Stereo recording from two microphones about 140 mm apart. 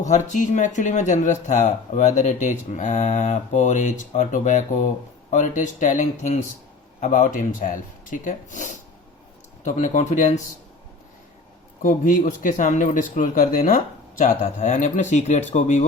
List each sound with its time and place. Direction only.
0.0 s speech: 60° left (ahead or behind)
11.8 s speech: 70° left (ahead or behind)